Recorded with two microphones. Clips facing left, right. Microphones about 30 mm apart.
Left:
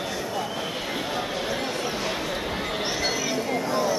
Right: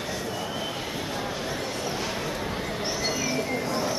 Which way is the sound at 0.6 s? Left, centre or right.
Left.